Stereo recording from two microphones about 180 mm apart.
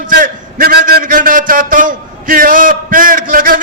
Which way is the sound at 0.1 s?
55° right (ahead or behind).